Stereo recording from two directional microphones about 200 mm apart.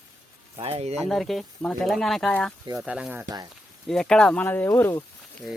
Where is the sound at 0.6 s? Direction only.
30° right (ahead or behind).